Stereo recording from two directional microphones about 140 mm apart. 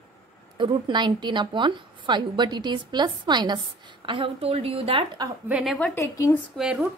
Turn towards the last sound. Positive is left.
turn(degrees=-5)  # may be behind; listen again after turning